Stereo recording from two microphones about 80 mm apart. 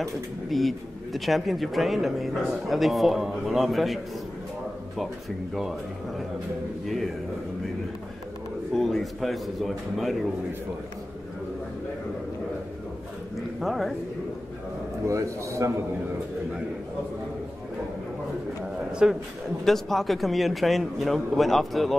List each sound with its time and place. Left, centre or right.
0.0 s speech: centre
5.5 s speech: centre
8.7 s speech: centre
13.6 s speech: centre
15.0 s a man's voice: right
18.6 s a sound: centre
19.6 s speech: centre